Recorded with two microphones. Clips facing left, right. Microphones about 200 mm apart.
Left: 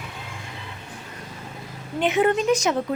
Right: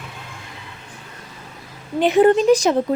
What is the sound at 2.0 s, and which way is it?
Speech, 35° right (ahead or behind).